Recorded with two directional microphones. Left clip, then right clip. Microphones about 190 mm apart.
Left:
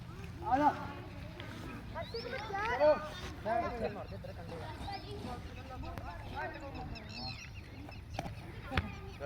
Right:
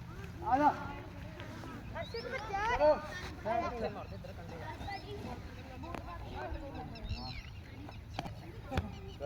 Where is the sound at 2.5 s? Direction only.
55° left (ahead or behind).